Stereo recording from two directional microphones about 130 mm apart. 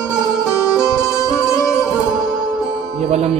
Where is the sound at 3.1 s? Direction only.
55° right (ahead or behind).